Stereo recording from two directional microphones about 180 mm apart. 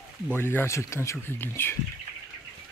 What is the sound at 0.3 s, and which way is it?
Speech, 10° left (ahead or behind).